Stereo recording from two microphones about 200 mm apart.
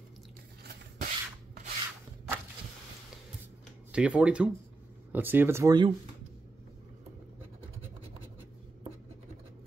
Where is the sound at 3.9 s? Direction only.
5° right (ahead or behind).